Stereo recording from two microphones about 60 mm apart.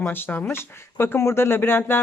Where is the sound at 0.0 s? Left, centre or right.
Left.